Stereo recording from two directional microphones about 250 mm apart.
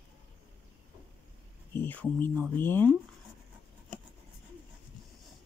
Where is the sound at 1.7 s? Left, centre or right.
Centre.